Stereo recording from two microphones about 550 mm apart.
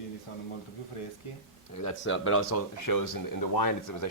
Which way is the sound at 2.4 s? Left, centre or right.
Left.